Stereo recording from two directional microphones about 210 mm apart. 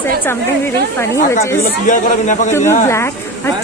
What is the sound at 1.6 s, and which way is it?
Speech, 40° left (ahead or behind).